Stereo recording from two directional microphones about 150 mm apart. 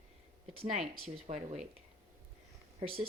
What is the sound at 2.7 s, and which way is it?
Speech, 35° right (ahead or behind).